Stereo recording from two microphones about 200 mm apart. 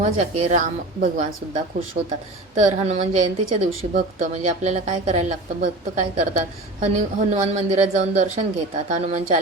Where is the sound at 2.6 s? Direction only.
35° right (ahead or behind).